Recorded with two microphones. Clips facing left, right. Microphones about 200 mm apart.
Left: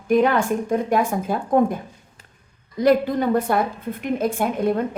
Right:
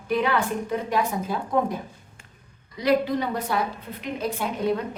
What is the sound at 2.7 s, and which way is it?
A woman's voice, 50° left (ahead or behind).